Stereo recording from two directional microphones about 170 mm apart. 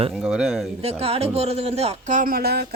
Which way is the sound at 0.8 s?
35° right (ahead or behind).